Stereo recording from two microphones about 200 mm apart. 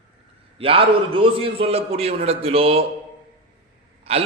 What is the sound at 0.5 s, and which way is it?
A man's voice, 30° right (ahead or behind).